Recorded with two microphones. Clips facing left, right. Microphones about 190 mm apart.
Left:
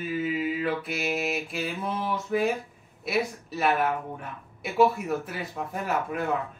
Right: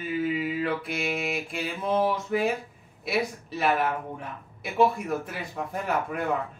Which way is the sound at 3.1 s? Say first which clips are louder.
Even; centre (ahead or behind).